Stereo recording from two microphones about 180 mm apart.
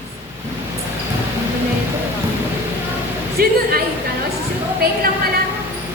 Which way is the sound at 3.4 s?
55° right (ahead or behind).